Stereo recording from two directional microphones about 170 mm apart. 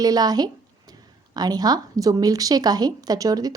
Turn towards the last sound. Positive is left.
turn(degrees=-20)  # may be behind; listen again after turning